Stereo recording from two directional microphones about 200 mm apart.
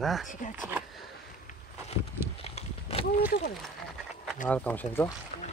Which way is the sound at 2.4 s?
30° left (ahead or behind).